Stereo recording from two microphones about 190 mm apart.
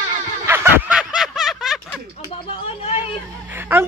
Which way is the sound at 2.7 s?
30° left (ahead or behind).